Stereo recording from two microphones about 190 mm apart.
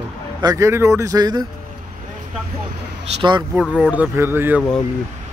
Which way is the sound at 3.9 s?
10° right (ahead or behind).